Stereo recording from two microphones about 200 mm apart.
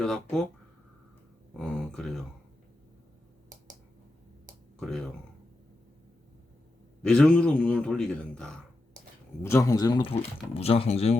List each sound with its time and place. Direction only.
0.0 s a man's voice: centre (ahead or behind)
1.5 s a man's voice: 5° left (ahead or behind)
4.8 s a man's voice: centre (ahead or behind)
7.0 s a man's voice: 5° left (ahead or behind); by 11.2 s 30° left (ahead or behind)